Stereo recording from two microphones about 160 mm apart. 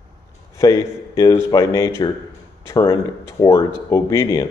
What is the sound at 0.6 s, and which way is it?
A man's voice, 20° left (ahead or behind).